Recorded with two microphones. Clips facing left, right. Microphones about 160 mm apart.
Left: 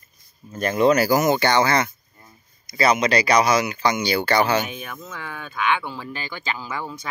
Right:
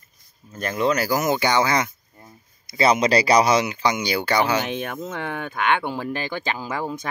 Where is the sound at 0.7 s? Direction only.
20° left (ahead or behind).